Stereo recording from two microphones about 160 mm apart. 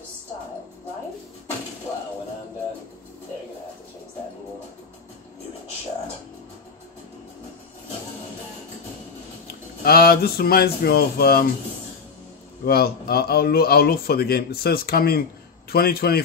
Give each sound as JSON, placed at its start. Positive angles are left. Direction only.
{"t": 9.8, "sound": "a man's voice", "side_deg": 75}
{"t": 12.6, "sound": "a man's voice", "side_deg": 70}